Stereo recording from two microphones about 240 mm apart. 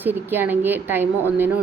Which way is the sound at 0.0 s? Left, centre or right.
Centre.